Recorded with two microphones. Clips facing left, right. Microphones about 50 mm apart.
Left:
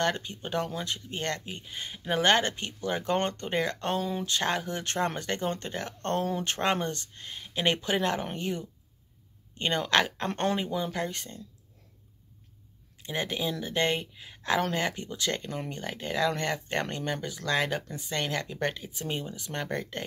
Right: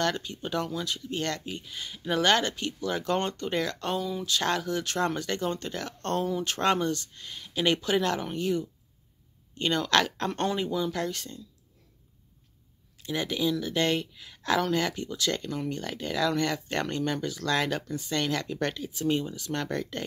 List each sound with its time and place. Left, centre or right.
0.0 s speech: left
4.0 s speech: left
4.3 s speech: left
13.0 s speech: left